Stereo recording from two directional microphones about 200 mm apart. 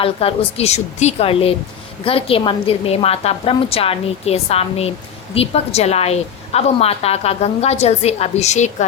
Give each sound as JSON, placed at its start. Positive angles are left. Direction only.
{"t": 0.0, "sound": "a woman's voice", "side_deg": 30}